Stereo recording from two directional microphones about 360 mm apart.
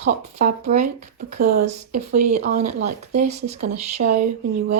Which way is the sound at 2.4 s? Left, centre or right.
Centre.